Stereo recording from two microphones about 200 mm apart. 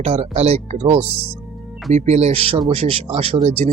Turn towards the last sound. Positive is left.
turn(degrees=-30)  # may be behind; listen again after turning